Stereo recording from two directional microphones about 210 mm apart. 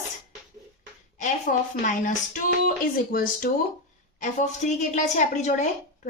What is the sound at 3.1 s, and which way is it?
Speech, 45° left (ahead or behind).